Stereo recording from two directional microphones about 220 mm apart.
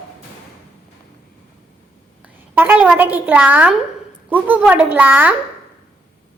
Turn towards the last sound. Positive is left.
turn(degrees=-10)  # may be behind; listen again after turning